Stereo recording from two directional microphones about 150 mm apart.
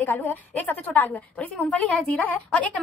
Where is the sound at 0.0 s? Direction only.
15° left (ahead or behind).